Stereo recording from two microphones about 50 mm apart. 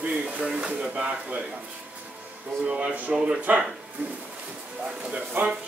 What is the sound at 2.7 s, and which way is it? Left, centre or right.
Speech, right.